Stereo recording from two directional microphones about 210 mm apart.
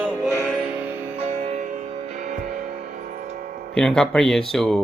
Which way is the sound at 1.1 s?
30° right (ahead or behind).